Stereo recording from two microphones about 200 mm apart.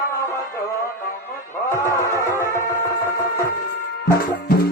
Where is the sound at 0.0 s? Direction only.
15° left (ahead or behind).